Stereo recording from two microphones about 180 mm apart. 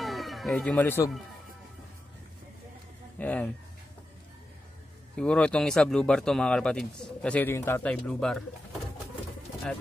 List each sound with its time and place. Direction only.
0.0 s music: centre (ahead or behind)
3.2 s speech: 10° left (ahead or behind)
5.1 s speech: 5° left (ahead or behind)